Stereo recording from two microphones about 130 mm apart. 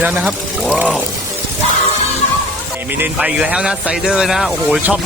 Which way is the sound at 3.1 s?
5° right (ahead or behind).